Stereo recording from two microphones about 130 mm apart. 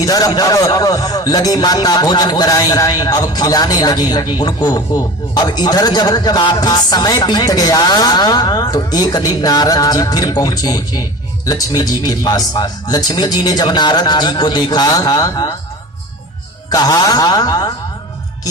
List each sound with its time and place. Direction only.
0.0 s a man's voice: 30° left (ahead or behind)
16.6 s a man's voice: 30° left (ahead or behind)